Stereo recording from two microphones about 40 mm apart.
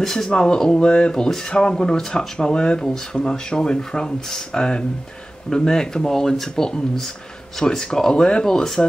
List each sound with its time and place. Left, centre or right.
0.0 s speech: centre
0.3 s speech: left